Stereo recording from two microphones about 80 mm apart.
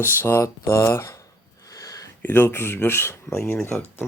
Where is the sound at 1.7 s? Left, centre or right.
Left.